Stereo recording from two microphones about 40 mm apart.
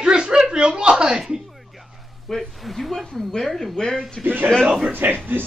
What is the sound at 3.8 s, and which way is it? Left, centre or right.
Speech, centre.